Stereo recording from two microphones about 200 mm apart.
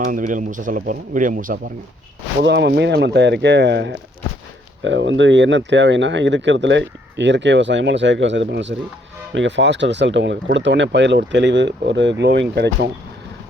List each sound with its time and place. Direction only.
0.0 s speech: 40° right (ahead or behind)
2.4 s speech: 60° right (ahead or behind)